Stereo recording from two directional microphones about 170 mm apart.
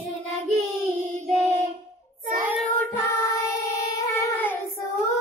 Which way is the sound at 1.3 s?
40° right (ahead or behind).